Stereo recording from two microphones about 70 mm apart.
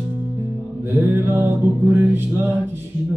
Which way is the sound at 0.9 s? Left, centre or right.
Right.